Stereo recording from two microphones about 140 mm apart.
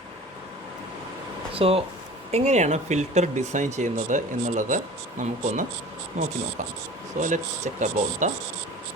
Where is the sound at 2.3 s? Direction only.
55° right (ahead or behind).